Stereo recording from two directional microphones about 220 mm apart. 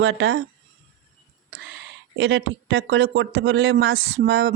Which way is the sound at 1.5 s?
60° right (ahead or behind).